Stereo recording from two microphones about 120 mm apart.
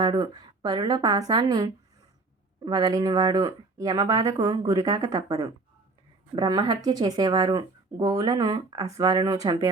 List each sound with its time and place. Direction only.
0.2 s speech: 35° right (ahead or behind)